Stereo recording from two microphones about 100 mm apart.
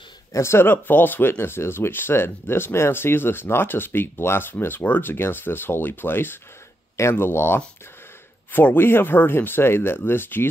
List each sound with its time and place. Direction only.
0.3 s speech: 25° left (ahead or behind)